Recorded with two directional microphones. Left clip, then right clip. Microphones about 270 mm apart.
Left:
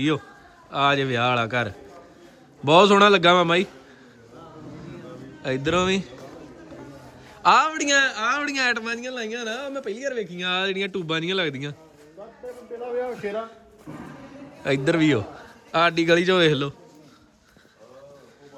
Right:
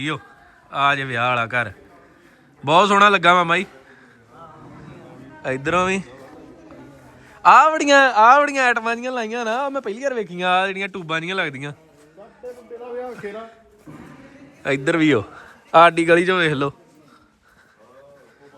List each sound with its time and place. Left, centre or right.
0.7 s a man's voice: centre
5.4 s speech: centre
7.4 s speech: centre
12.8 s a sound: centre
13.1 s speech: centre
14.6 s speech: centre